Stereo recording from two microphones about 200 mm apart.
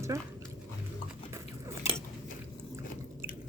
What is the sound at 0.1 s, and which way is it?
Speech, 15° right (ahead or behind).